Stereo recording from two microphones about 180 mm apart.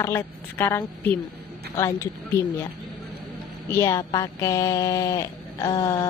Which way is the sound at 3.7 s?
15° left (ahead or behind).